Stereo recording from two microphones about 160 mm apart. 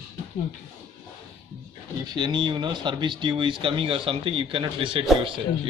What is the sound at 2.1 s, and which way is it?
Speech, 30° right (ahead or behind).